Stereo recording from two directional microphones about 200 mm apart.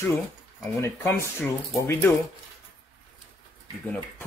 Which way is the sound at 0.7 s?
15° left (ahead or behind).